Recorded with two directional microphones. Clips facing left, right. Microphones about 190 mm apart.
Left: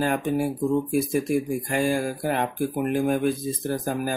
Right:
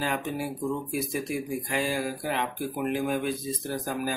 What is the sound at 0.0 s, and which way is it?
Speech, 50° left (ahead or behind).